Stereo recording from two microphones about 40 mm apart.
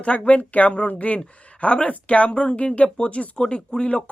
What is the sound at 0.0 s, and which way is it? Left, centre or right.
Speech, left.